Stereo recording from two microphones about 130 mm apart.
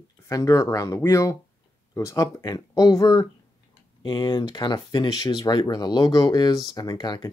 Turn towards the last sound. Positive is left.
turn(degrees=30)  # may be behind; listen again after turning